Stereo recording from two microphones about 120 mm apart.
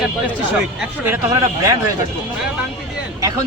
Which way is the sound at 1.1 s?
30° right (ahead or behind).